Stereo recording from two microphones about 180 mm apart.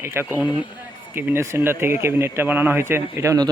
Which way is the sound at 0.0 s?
10° right (ahead or behind).